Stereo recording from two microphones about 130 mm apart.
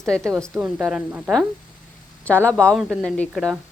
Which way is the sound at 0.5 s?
5° right (ahead or behind).